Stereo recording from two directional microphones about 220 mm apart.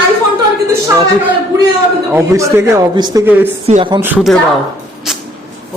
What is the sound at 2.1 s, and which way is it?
Speech, 10° right (ahead or behind).